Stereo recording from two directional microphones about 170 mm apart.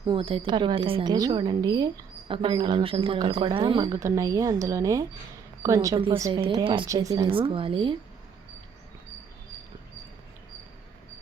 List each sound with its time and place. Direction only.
0.0 s a woman's voice: 30° right (ahead or behind)
7.3 s a woman's voice: 30° right (ahead or behind)